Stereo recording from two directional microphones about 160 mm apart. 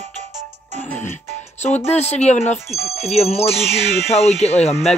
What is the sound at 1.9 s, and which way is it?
Speech, 40° left (ahead or behind).